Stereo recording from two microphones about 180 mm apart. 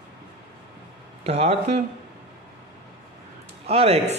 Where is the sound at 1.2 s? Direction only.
35° right (ahead or behind).